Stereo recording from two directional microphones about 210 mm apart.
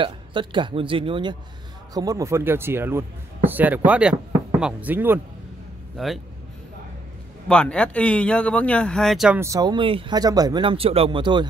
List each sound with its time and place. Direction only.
0.0 s speech: 25° right (ahead or behind)
7.4 s speech: 5° left (ahead or behind)
9.4 s speech: 15° right (ahead or behind)